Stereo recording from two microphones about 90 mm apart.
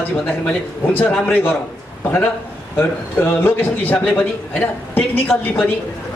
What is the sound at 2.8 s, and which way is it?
A man's voice, 25° left (ahead or behind).